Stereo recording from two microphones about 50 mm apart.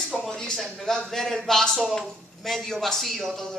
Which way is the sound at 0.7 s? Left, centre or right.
Centre.